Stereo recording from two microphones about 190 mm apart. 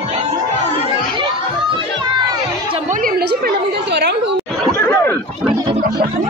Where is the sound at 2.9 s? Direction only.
50° right (ahead or behind).